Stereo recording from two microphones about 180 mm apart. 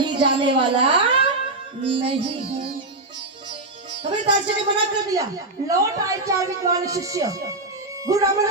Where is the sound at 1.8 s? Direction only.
30° right (ahead or behind).